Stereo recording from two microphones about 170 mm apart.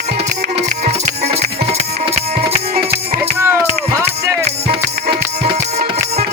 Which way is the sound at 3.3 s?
15° right (ahead or behind).